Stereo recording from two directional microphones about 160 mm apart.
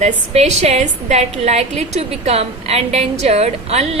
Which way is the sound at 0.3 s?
45° right (ahead or behind).